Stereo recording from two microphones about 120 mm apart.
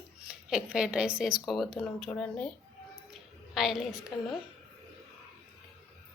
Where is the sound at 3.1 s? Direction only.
5° right (ahead or behind).